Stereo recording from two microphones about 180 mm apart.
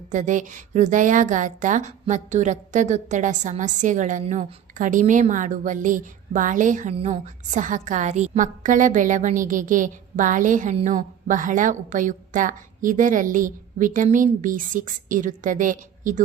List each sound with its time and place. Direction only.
0.1 s a woman's voice: 45° right (ahead or behind)